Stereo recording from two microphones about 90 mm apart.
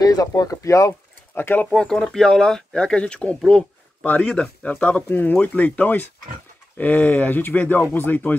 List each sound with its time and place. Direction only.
0.0 s speech: 45° left (ahead or behind)
1.3 s speech: 25° left (ahead or behind)